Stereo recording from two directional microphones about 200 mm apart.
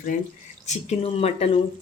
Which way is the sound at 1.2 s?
30° left (ahead or behind).